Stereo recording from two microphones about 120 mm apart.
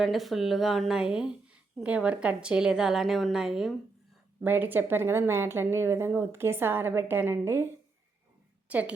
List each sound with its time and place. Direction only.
0.0 s a woman's voice: centre (ahead or behind)
4.4 s a woman's voice: 15° right (ahead or behind)
8.7 s a woman's voice: 10° right (ahead or behind)